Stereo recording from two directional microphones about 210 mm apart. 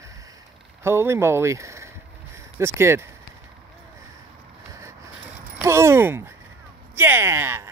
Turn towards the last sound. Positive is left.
turn(degrees=-10)  # may be behind; listen again after turning